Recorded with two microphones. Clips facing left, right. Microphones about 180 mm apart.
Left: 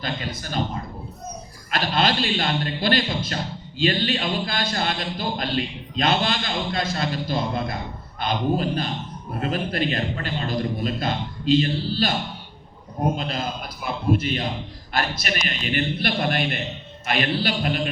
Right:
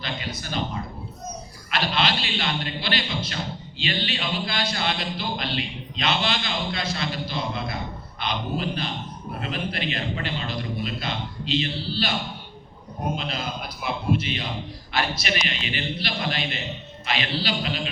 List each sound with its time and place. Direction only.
0.0 s a man's voice: 45° left (ahead or behind)
13.1 s a man's voice: 45° left (ahead or behind)